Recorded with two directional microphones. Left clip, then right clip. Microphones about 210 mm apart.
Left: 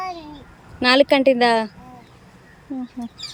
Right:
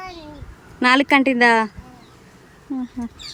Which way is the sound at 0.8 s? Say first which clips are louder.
Left 1 dB; 15° right (ahead or behind).